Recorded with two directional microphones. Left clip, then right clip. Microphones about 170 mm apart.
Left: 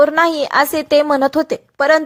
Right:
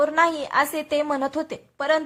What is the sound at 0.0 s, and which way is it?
A woman's voice, 40° left (ahead or behind).